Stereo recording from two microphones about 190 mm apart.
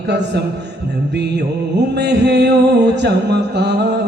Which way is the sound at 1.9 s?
60° right (ahead or behind).